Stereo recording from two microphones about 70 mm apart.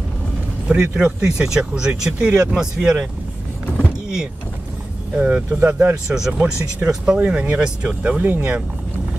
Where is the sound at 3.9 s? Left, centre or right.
Centre.